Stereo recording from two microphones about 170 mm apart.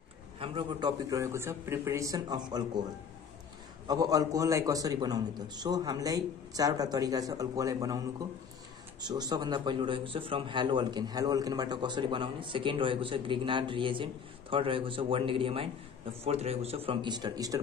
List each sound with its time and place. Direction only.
0.4 s a man's voice: 30° right (ahead or behind)
3.8 s a man's voice: 20° right (ahead or behind)